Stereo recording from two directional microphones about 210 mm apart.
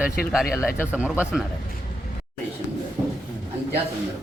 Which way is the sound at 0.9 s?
5° right (ahead or behind).